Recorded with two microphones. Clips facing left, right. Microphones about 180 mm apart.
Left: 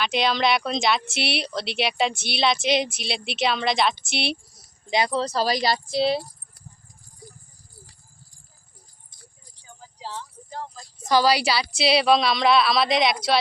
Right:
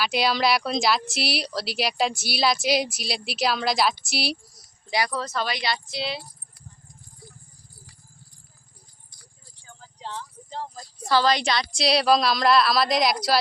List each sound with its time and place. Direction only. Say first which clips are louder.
0.0 s speech: left 1 dB; 5° right (ahead or behind)
4.9 s speech: left 4 dB; 25° left (ahead or behind)
7.2 s a sound: left 4 dB; 15° left (ahead or behind)
9.6 s keys jangling: even; 5° left (ahead or behind)
11.1 s speech: left 2 dB; 10° left (ahead or behind)